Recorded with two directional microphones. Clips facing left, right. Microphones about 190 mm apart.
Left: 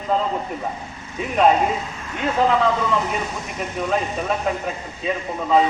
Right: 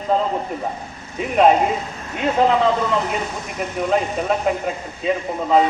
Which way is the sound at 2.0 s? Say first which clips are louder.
Right 2 dB; 25° right (ahead or behind).